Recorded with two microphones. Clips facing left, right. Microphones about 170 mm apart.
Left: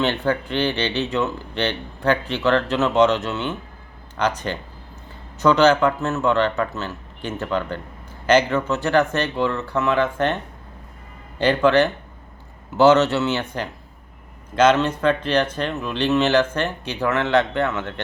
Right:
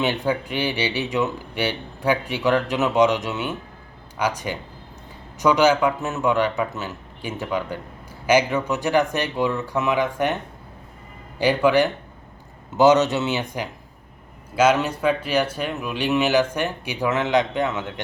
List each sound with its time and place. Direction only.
0.0 s speech: 10° right (ahead or behind)
11.3 s speech: 10° right (ahead or behind)